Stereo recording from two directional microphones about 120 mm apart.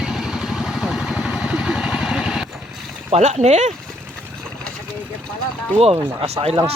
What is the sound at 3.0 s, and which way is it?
Speech, 60° right (ahead or behind).